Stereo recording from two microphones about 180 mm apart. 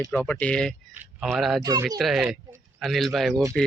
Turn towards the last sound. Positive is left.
turn(degrees=0)  # may be behind; listen again after turning